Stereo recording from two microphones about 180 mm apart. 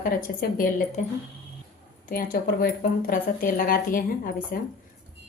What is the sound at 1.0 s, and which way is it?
Speech, 40° left (ahead or behind).